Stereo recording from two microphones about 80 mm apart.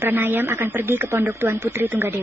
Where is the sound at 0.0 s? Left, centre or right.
Right.